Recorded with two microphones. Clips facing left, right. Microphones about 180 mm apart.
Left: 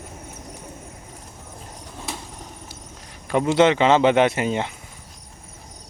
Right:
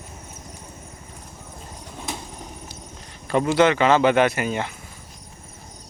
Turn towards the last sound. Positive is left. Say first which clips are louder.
# left 1 dB
turn(degrees=25)  # may be behind; listen again after turning